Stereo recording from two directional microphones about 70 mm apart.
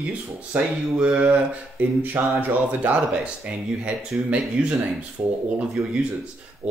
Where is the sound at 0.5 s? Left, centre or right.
Centre.